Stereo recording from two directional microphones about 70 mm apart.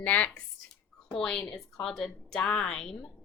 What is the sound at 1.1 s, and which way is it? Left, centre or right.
A woman's voice, centre.